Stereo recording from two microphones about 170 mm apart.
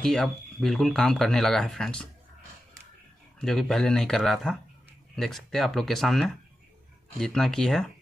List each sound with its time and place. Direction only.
0.0 s speech: centre (ahead or behind)
3.3 s speech: 5° left (ahead or behind)